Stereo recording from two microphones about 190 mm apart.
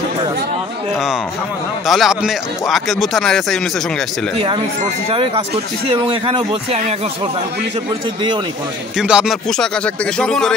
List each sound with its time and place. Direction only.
1.9 s speech: centre (ahead or behind)
5.1 s speech: 30° right (ahead or behind)
8.9 s speech: 5° right (ahead or behind)